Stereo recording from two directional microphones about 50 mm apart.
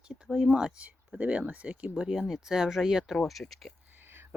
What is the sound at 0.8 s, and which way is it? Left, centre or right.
Speech, right.